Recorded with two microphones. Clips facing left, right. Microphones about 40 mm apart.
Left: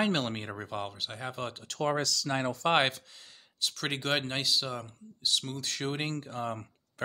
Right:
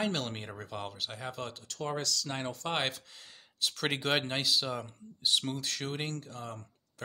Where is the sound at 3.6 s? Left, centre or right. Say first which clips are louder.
Right 1 dB; centre.